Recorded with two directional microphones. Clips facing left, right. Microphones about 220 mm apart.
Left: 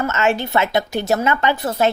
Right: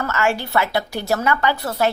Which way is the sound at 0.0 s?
20° left (ahead or behind).